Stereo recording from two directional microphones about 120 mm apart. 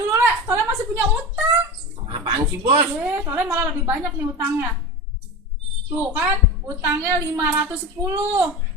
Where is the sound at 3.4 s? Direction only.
15° right (ahead or behind).